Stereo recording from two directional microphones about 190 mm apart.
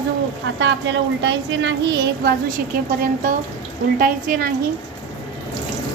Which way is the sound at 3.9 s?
50° right (ahead or behind).